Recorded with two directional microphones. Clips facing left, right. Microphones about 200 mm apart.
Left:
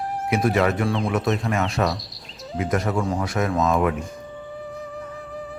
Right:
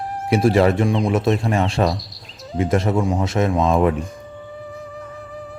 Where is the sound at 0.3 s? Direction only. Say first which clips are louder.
Right 5 dB; 30° right (ahead or behind).